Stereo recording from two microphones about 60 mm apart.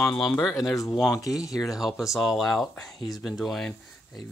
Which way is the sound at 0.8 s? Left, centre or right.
Left.